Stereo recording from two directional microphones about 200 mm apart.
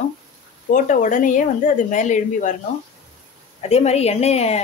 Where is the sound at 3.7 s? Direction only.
30° left (ahead or behind).